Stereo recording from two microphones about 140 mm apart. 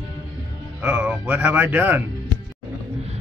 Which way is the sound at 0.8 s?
10° right (ahead or behind).